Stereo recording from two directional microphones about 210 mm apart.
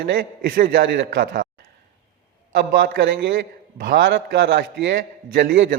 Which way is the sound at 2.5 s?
50° right (ahead or behind).